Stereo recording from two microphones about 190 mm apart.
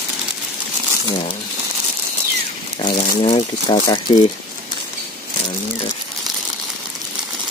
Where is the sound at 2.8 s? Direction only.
30° left (ahead or behind).